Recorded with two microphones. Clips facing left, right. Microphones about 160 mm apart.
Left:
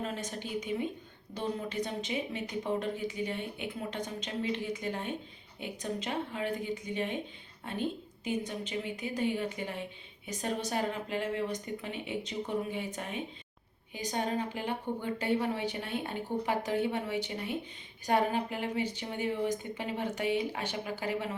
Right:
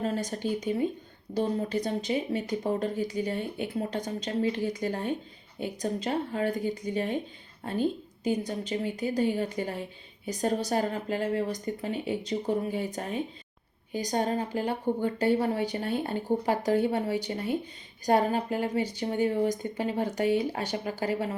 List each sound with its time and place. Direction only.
0.0 s speech: 35° right (ahead or behind)